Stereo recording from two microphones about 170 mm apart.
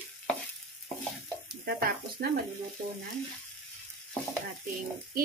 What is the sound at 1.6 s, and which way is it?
Speech, 60° right (ahead or behind).